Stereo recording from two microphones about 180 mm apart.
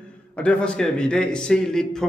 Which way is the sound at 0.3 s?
5° left (ahead or behind).